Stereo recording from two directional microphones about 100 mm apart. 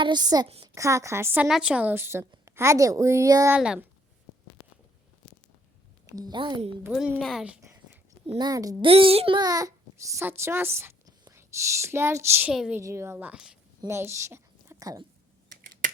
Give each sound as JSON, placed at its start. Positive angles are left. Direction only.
{"t": 0.0, "sound": "a woman's voice", "side_deg": -45}
{"t": 0.7, "sound": "a woman's voice", "side_deg": -30}
{"t": 1.4, "sound": "a woman's voice", "side_deg": -5}
{"t": 3.5, "sound": "a woman's voice", "side_deg": -15}
{"t": 6.1, "sound": "a woman's voice", "side_deg": -35}
{"t": 6.3, "sound": "a woman's voice", "side_deg": -50}
{"t": 7.2, "sound": "speech", "side_deg": 5}
{"t": 8.4, "sound": "a child's voice", "side_deg": -40}
{"t": 8.8, "sound": "a child's voice", "side_deg": -65}
{"t": 9.4, "sound": "a child's voice", "side_deg": -35}
{"t": 12.5, "sound": "a woman's voice", "side_deg": -10}
{"t": 12.8, "sound": "a woman's voice", "side_deg": -30}
{"t": 13.8, "sound": "a woman's voice", "side_deg": -25}